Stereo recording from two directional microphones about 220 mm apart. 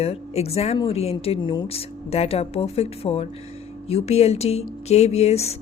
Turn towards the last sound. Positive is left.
turn(degrees=30)  # may be behind; listen again after turning